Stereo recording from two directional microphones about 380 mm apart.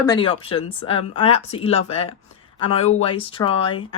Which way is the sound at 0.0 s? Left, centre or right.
Centre.